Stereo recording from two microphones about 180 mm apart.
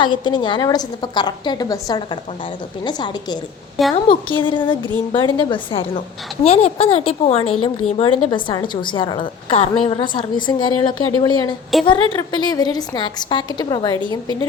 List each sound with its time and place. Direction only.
0.0 s a woman's voice: 25° left (ahead or behind)
3.8 s a woman's voice: centre (ahead or behind)
4.4 s a woman's voice: 25° left (ahead or behind)
11.7 s a woman's voice: centre (ahead or behind)
12.3 s a woman's voice: 25° left (ahead or behind)